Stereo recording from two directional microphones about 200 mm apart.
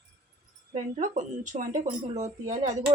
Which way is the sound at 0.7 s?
35° right (ahead or behind).